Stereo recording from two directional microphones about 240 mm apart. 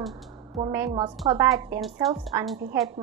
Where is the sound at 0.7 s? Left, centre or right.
Centre.